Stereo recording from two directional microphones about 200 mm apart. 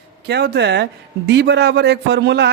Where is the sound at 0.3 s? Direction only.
55° right (ahead or behind).